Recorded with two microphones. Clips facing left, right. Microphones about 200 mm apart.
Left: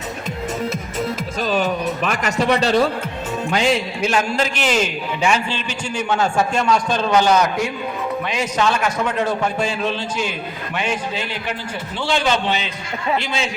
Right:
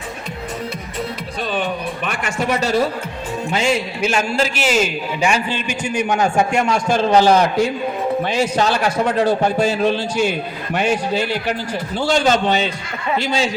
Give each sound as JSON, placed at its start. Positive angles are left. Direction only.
{"t": 2.4, "sound": "a man's voice", "side_deg": -5}